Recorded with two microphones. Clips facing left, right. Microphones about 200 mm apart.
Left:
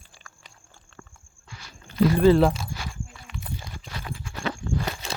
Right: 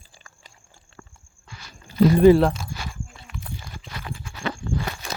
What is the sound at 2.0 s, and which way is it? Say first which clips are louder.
Speech: right 4 dB; 20° right (ahead or behind).